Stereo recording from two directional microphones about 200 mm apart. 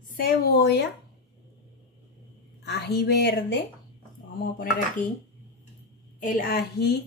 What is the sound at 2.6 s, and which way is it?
Speech, 55° left (ahead or behind).